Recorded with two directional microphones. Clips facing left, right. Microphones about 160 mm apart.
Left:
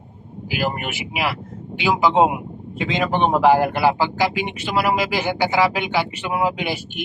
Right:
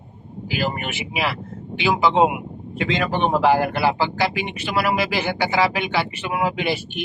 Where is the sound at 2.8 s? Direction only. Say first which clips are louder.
Left 1 dB; 20° left (ahead or behind).